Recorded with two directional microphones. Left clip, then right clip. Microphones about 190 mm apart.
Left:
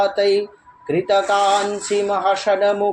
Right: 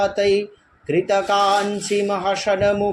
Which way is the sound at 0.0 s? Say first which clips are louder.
Left 1 dB; 10° right (ahead or behind).